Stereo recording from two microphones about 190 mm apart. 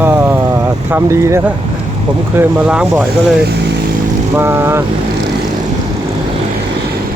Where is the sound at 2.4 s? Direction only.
10° right (ahead or behind).